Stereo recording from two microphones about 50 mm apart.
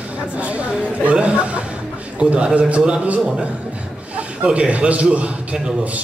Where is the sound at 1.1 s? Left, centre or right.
Right.